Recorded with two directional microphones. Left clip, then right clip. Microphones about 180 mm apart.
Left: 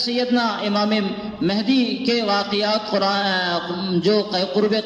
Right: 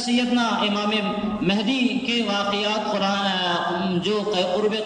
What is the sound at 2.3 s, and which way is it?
A man's voice, 45° left (ahead or behind).